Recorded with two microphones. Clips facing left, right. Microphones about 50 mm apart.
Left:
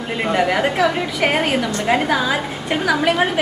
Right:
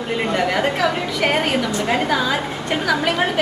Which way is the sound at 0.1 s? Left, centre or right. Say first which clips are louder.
Left 2 dB; centre.